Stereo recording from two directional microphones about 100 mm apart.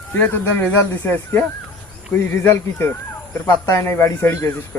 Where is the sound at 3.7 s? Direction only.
30° left (ahead or behind).